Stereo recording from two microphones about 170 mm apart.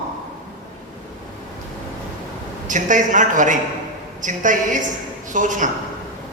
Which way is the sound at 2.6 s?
50° right (ahead or behind).